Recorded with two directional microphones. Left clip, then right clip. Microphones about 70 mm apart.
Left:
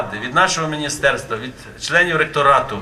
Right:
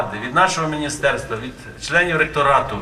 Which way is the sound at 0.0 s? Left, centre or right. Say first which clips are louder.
Even; centre.